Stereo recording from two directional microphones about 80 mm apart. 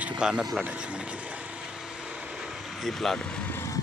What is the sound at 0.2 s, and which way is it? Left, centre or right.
Speech, centre.